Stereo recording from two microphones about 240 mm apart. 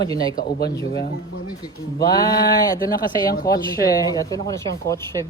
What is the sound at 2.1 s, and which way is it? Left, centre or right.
Speech, centre.